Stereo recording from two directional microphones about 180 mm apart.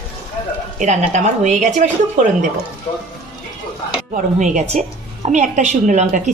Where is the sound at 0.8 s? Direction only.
40° right (ahead or behind).